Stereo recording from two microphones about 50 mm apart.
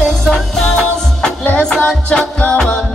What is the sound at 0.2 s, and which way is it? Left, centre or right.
Music, centre.